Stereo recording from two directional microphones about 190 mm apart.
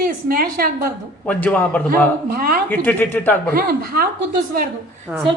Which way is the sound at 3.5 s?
50° right (ahead or behind).